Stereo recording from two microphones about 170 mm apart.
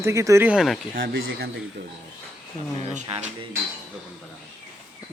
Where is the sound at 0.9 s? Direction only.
65° right (ahead or behind).